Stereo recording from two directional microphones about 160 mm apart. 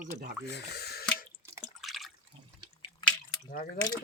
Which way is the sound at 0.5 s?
85° left.